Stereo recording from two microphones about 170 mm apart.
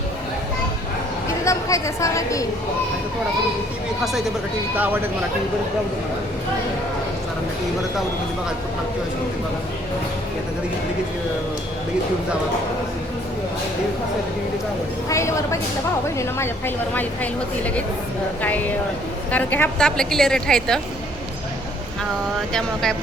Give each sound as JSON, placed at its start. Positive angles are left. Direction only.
{"t": 1.5, "sound": "a woman's voice", "side_deg": 20}
{"t": 15.1, "sound": "speech", "side_deg": 15}
{"t": 19.3, "sound": "a woman's voice", "side_deg": 10}
{"t": 22.5, "sound": "a woman's voice", "side_deg": 5}